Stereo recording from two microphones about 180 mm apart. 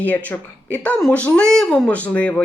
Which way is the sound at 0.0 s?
10° left (ahead or behind).